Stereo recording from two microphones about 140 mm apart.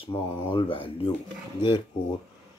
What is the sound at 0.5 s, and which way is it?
Speech, 40° left (ahead or behind).